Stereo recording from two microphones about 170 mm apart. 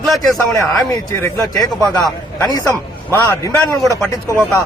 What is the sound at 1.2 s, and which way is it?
Speech, 15° left (ahead or behind).